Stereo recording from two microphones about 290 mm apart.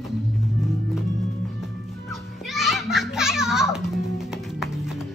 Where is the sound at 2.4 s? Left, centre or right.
Centre.